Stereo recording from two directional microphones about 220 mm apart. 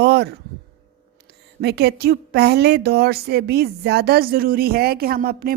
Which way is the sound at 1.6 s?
50° right (ahead or behind).